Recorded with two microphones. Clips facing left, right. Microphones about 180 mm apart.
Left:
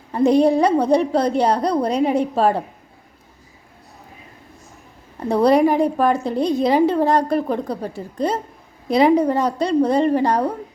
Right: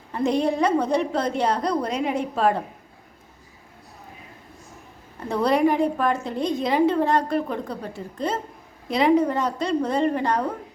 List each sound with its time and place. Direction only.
0.1 s a woman's voice: 35° left (ahead or behind)
5.3 s a woman's voice: 35° left (ahead or behind)